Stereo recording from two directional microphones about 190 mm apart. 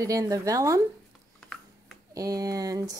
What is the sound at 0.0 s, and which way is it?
Speech, 20° right (ahead or behind).